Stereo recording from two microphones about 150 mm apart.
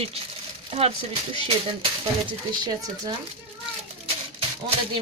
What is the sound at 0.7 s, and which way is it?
Speech, 40° right (ahead or behind).